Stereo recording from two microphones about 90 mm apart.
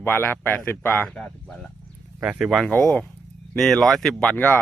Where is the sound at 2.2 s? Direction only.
10° right (ahead or behind).